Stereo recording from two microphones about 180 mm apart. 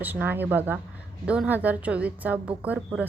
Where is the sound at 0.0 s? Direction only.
10° right (ahead or behind).